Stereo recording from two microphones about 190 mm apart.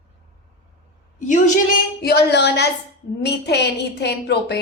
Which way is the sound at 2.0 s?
55° left (ahead or behind).